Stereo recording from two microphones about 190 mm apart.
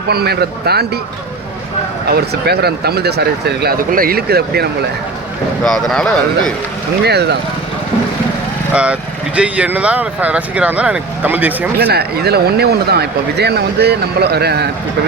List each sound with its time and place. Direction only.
0.1 s speech: 55° right (ahead or behind)
2.0 s speech: 55° right (ahead or behind)
5.6 s speech: centre (ahead or behind)
7.0 s speech: 60° right (ahead or behind)
8.7 s speech: 5° right (ahead or behind)
11.8 s speech: 55° right (ahead or behind)